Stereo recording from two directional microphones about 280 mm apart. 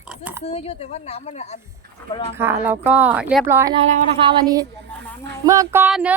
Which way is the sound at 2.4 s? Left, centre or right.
Centre.